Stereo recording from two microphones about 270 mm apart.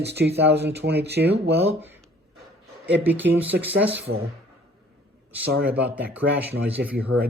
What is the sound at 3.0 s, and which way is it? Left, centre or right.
Speech, centre.